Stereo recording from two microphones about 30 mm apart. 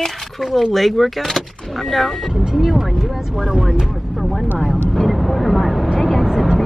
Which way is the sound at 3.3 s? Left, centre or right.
Centre.